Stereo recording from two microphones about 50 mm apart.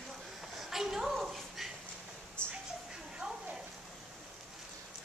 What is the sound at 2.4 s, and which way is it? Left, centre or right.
Music, left.